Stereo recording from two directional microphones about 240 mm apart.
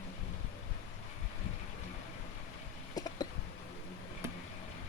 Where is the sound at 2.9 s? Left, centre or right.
Centre.